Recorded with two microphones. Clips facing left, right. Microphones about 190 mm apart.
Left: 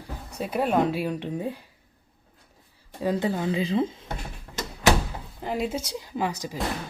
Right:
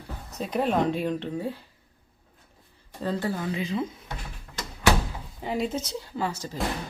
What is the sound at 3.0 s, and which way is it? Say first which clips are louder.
Speech: left 3 dB; 15° left (ahead or behind).